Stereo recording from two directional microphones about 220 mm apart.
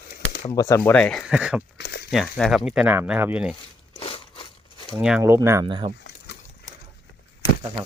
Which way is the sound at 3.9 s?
25° left (ahead or behind).